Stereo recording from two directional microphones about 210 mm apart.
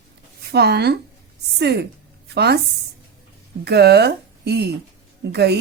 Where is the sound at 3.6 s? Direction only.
50° right (ahead or behind).